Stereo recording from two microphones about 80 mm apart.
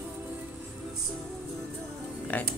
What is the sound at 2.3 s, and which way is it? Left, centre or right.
Music, centre.